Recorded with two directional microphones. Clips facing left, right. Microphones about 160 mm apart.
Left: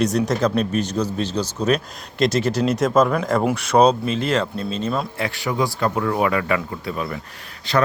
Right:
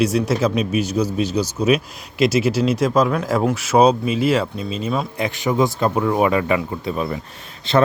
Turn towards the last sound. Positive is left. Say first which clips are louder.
# right 3 dB
turn(degrees=-25)  # may be behind; listen again after turning